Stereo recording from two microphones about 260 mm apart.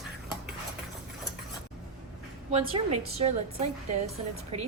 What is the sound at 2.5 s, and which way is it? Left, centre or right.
Speech, right.